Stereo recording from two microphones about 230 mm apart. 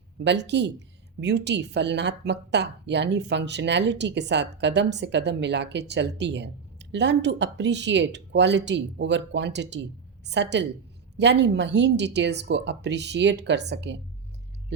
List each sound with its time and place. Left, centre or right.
0.3 s a woman's voice: right